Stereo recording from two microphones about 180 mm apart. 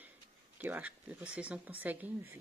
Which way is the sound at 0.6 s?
10° right (ahead or behind).